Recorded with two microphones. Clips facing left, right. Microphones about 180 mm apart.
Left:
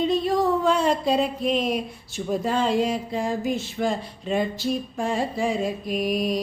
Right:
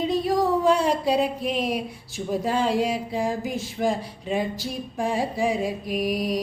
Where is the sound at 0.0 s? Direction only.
10° right (ahead or behind).